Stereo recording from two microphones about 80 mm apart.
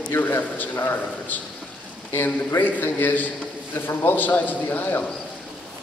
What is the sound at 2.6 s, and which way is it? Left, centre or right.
A man's voice, left.